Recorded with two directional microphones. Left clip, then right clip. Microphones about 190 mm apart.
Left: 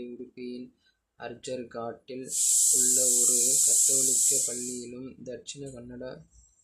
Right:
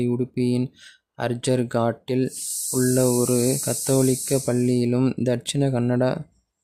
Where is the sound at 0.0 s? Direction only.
55° right (ahead or behind).